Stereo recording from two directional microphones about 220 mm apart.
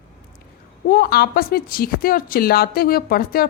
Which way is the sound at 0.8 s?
45° left (ahead or behind).